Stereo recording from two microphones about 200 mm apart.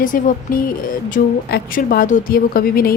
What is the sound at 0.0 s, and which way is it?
A woman's voice, 40° left (ahead or behind).